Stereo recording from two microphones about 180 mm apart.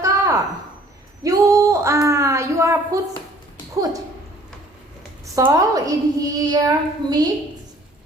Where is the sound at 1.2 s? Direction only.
20° right (ahead or behind).